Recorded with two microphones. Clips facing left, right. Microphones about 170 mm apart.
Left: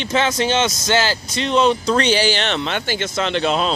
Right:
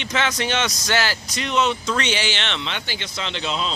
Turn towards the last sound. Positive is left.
turn(degrees=55)  # may be behind; listen again after turning